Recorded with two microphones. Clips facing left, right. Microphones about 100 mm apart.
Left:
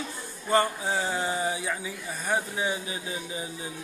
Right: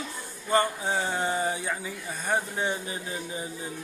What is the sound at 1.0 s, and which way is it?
Speech, 25° right (ahead or behind).